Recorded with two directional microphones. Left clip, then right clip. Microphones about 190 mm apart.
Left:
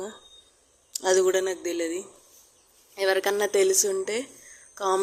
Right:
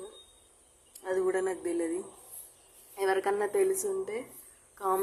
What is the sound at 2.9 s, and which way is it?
A woman's voice, 10° left (ahead or behind).